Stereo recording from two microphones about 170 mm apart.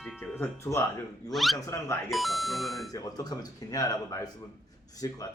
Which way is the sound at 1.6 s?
20° left (ahead or behind).